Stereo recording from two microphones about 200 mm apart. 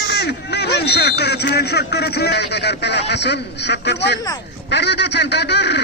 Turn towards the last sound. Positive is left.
turn(degrees=60)  # may be behind; listen again after turning